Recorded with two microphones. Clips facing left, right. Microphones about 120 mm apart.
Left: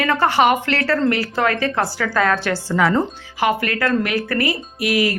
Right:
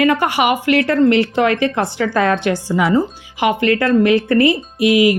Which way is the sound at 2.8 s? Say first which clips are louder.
Right 2 dB; 5° right (ahead or behind).